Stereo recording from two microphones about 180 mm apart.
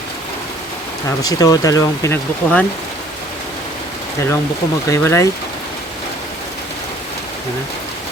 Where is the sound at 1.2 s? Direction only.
20° left (ahead or behind).